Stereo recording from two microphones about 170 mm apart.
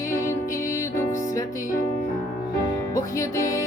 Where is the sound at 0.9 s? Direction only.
15° left (ahead or behind).